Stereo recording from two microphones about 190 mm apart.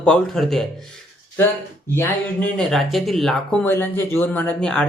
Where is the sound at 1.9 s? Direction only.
10° left (ahead or behind).